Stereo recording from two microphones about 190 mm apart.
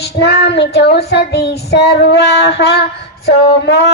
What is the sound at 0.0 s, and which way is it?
Female singing, 60° left (ahead or behind).